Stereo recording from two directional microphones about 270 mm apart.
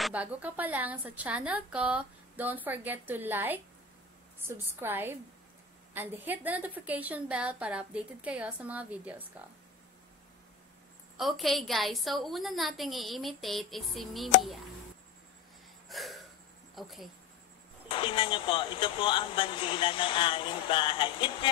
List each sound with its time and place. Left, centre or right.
0.0 s a woman's voice: centre
11.1 s a woman's voice: centre
15.9 s a sound: centre
16.7 s a woman's voice: centre
17.8 s speech: centre